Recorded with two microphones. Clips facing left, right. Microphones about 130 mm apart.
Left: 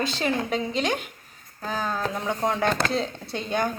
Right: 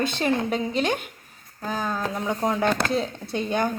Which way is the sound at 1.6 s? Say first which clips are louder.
Even; 10° right (ahead or behind).